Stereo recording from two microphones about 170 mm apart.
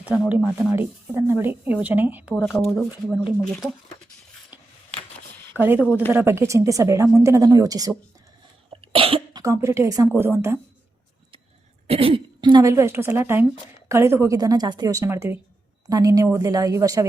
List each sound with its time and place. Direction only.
0.0 s speech: 10° right (ahead or behind)
2.3 s speech: centre (ahead or behind)
5.5 s speech: 10° right (ahead or behind)
8.7 s cough: 35° right (ahead or behind)
9.4 s speech: 20° right (ahead or behind)
11.9 s a woman's voice: 35° right (ahead or behind)